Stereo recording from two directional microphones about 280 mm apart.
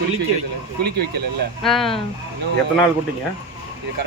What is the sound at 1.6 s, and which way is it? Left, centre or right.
Speech, centre.